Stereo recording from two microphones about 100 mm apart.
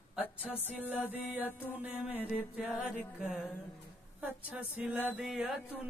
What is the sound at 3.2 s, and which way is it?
Speech, 5° right (ahead or behind).